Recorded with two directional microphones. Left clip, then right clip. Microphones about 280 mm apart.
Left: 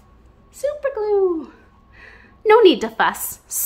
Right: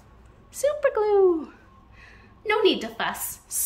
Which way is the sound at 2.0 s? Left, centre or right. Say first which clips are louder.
Left 14 dB; centre.